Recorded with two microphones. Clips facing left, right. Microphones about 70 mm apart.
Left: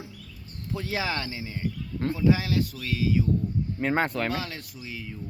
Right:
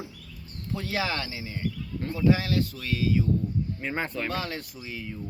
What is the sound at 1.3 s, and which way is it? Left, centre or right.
Speech, centre.